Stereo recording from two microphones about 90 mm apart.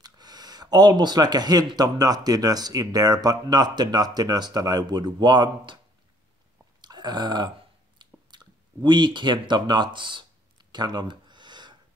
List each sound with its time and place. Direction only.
0.0 s speech: 50° right (ahead or behind)
6.8 s chewing: 55° right (ahead or behind)
8.0 s clicking: 55° right (ahead or behind)